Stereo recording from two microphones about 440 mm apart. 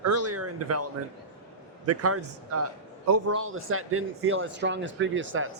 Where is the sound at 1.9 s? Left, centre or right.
Right.